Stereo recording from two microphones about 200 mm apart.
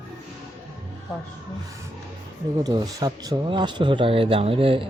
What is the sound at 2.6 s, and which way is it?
Speech, 20° right (ahead or behind).